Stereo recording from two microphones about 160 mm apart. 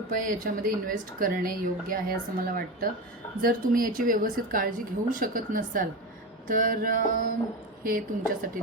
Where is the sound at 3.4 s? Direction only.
60° right (ahead or behind).